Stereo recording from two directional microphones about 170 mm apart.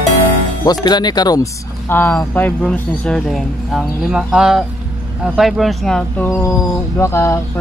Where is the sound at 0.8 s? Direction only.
25° left (ahead or behind).